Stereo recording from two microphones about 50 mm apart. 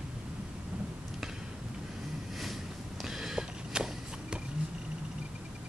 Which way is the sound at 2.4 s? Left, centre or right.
Centre.